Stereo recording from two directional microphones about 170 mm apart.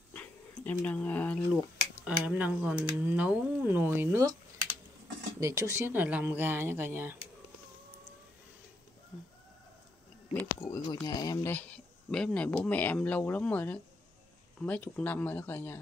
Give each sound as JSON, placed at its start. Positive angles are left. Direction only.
{"t": 0.1, "sound": "a sound", "side_deg": 10}
{"t": 2.0, "sound": "speech", "side_deg": -10}
{"t": 5.4, "sound": "speech", "side_deg": -15}
{"t": 10.3, "sound": "speech", "side_deg": 15}
{"t": 10.9, "sound": "speech", "side_deg": 25}
{"t": 11.5, "sound": "speech", "side_deg": 5}